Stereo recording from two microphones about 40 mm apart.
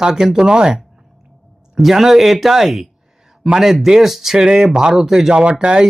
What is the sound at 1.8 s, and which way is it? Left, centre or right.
Speech, centre.